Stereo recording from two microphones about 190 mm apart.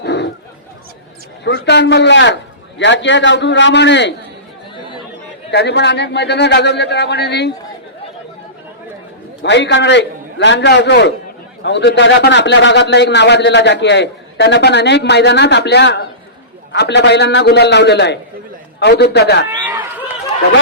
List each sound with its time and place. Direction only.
0.0 s chatter: 65° left (ahead or behind)
1.5 s a man's voice: 65° left (ahead or behind)
5.5 s speech: 60° left (ahead or behind)
9.4 s speech: 65° left (ahead or behind)
19.5 s run: 20° right (ahead or behind)